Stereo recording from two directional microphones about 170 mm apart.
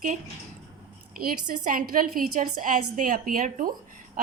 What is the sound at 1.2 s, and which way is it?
A woman's voice, 50° right (ahead or behind).